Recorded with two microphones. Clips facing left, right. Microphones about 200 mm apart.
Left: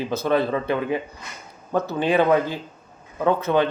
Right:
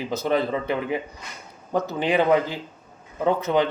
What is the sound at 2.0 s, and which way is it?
A man's voice, 15° right (ahead or behind).